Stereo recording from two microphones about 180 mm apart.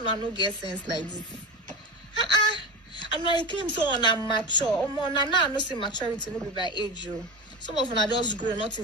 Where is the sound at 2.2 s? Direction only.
25° left (ahead or behind).